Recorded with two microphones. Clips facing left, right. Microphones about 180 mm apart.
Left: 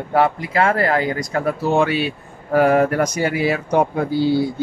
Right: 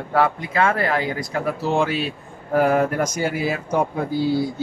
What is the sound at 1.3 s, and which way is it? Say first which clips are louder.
Speech: left 3 dB; 55° left (ahead or behind).